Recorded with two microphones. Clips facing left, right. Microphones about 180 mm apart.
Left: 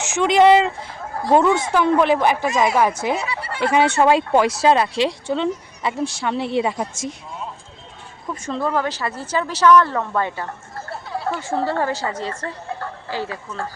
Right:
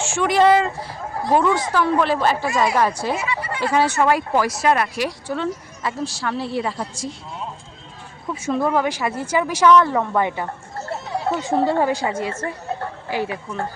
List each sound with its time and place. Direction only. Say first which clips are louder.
0.1 s speech: left 2 dB; 20° left (ahead or behind)
8.3 s speech: right 3 dB; 10° right (ahead or behind)